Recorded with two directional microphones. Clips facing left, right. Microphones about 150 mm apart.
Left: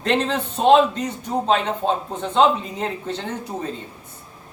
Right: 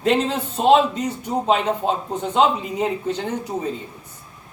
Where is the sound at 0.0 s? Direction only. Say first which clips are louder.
Right 2 dB; 10° right (ahead or behind).